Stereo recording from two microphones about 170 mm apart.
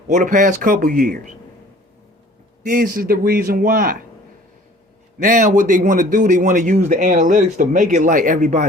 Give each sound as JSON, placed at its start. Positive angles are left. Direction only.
{"t": 0.1, "sound": "speech", "side_deg": -50}
{"t": 2.6, "sound": "a man's voice", "side_deg": -60}
{"t": 5.2, "sound": "speech", "side_deg": -50}